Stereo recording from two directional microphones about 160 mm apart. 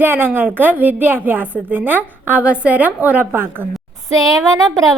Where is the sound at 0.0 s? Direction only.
10° right (ahead or behind).